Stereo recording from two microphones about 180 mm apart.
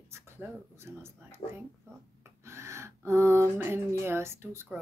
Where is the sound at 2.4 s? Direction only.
15° right (ahead or behind).